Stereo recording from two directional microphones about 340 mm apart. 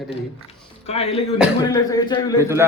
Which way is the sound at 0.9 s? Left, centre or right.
Centre.